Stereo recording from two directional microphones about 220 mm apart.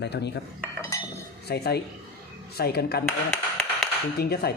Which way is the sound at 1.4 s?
45° left (ahead or behind).